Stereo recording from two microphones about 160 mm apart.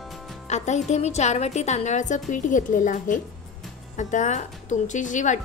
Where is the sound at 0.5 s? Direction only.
45° left (ahead or behind).